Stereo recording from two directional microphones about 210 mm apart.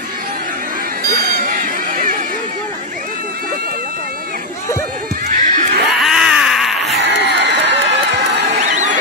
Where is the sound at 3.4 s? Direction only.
45° right (ahead or behind).